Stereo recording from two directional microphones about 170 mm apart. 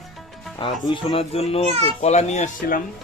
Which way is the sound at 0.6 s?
30° left (ahead or behind).